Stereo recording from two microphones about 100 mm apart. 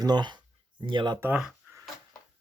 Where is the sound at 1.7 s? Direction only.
20° right (ahead or behind).